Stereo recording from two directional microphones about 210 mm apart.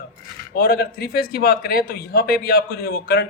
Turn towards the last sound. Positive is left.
turn(degrees=50)  # may be behind; listen again after turning